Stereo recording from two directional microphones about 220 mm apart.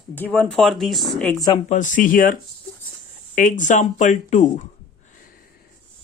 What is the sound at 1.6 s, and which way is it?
Speech, 35° left (ahead or behind).